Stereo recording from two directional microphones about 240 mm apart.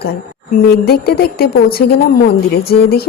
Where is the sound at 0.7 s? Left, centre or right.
Left.